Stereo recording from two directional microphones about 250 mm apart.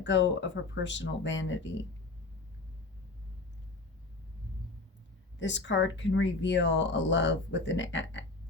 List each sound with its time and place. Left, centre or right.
0.0 s speech: left
5.4 s speech: left